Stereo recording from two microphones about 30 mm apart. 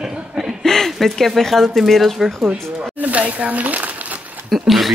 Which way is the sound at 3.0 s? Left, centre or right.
Right.